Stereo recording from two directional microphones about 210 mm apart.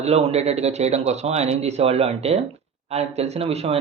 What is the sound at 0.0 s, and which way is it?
Speech, 30° right (ahead or behind).